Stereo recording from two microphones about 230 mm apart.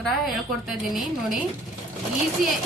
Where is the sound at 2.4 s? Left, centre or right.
Right.